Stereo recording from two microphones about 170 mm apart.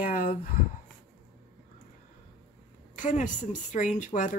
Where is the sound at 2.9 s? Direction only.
50° left (ahead or behind).